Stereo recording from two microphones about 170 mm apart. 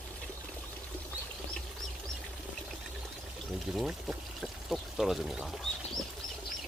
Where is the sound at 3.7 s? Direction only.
Centre (ahead or behind).